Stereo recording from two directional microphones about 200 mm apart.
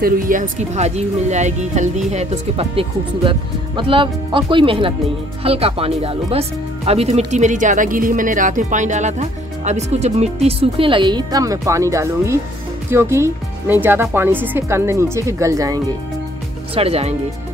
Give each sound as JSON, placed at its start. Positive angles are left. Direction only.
{"t": 0.0, "sound": "speech", "side_deg": -40}
{"t": 16.7, "sound": "speech", "side_deg": -30}